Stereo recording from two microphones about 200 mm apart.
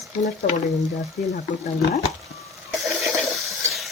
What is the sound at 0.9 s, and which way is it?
Speech, 35° left (ahead or behind).